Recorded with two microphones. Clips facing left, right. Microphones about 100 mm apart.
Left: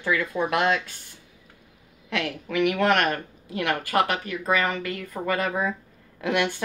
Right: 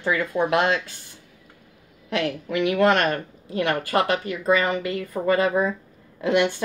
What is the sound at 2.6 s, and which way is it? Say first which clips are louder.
A woman's voice: right 2 dB; 25° right (ahead or behind).